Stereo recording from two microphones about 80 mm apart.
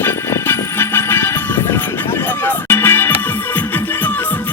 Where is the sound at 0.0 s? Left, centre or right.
Left.